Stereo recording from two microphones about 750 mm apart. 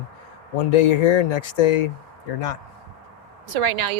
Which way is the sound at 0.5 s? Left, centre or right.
Left.